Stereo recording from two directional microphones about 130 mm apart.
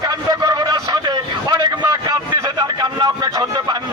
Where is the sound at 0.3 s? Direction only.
25° right (ahead or behind).